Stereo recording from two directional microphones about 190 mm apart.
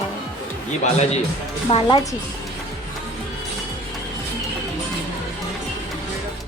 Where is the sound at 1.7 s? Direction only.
30° left (ahead or behind).